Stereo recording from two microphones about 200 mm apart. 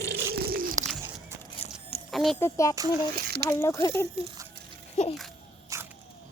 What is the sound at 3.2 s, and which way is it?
Speech, 55° right (ahead or behind).